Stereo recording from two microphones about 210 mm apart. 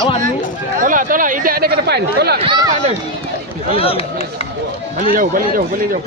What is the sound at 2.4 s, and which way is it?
Speech, 25° right (ahead or behind).